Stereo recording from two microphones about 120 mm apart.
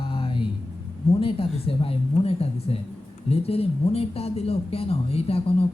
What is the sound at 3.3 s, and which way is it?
Speech, 55° left (ahead or behind).